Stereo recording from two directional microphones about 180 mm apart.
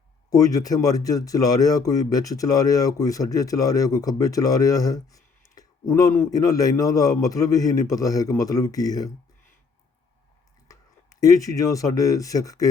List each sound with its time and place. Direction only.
0.3 s speech: 20° left (ahead or behind)
10.7 s speech: 20° left (ahead or behind)